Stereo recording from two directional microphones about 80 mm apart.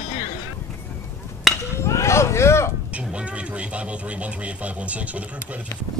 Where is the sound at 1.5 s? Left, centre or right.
Centre.